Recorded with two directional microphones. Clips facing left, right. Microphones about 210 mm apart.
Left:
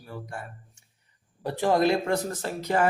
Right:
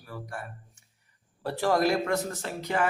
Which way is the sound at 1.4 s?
15° left (ahead or behind).